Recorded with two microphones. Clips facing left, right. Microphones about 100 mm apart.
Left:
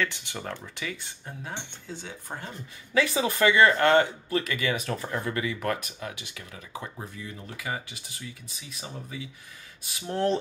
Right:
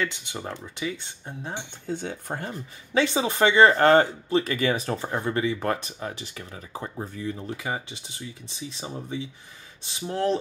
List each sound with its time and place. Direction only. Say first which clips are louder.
0.0 s speech: right 1 dB; 20° right (ahead or behind)
1.9 s speech: right 9 dB; 55° right (ahead or behind)
2.9 s speech: right 2 dB; 25° right (ahead or behind)
10.0 s speech: right 1 dB; centre (ahead or behind)